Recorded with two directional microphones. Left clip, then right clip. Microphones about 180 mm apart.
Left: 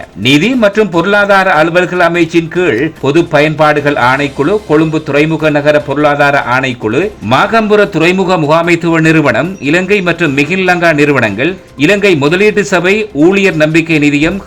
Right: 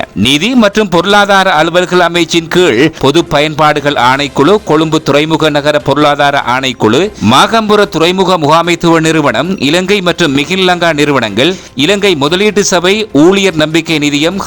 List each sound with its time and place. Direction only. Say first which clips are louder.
0.2 s a man's voice: even; 30° right (ahead or behind)